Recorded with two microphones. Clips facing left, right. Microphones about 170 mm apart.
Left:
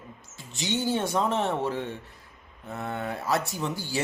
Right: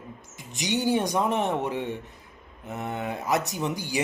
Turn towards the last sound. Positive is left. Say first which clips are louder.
# right 2 dB
turn(degrees=-15)  # may be behind; listen again after turning